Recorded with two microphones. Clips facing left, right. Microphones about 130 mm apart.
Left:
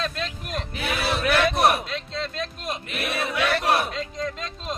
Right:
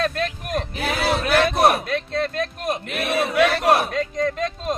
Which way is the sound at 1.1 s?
30° right (ahead or behind).